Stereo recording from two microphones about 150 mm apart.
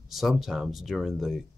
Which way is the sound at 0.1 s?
Centre (ahead or behind).